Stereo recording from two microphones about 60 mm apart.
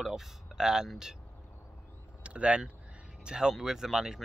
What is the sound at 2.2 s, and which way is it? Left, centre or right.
Speech, centre.